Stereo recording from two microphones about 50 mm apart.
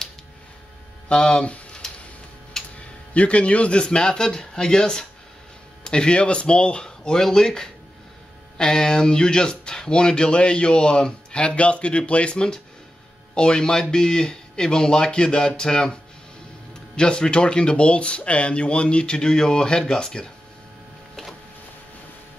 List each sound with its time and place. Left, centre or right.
1.0 s speech: centre
2.6 s a sound: centre
3.2 s speech: left
3.8 s speech: centre